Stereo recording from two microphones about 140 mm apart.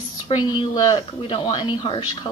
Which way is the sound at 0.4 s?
35° left (ahead or behind).